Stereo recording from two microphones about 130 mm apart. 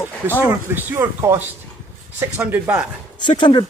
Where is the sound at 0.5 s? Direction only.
15° right (ahead or behind).